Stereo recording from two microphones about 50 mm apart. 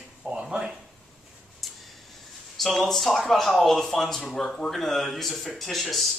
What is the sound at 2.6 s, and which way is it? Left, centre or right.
Speech, centre.